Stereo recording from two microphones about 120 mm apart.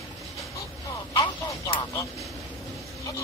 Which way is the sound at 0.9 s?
30° left (ahead or behind).